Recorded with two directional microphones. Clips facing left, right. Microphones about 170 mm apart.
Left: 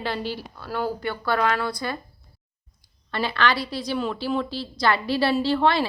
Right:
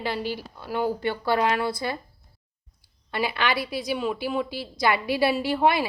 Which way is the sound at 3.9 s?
5° right (ahead or behind).